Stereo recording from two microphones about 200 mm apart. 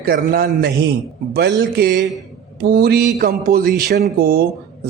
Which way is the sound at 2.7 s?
50° right (ahead or behind).